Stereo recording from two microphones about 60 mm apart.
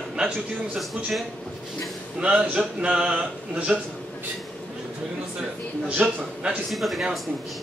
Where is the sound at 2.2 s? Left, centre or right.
Centre.